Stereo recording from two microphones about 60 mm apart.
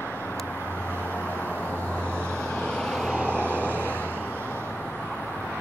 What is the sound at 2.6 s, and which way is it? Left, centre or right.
Vehicle, centre.